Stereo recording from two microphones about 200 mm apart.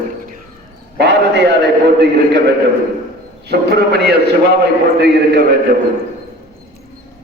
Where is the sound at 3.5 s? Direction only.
55° right (ahead or behind).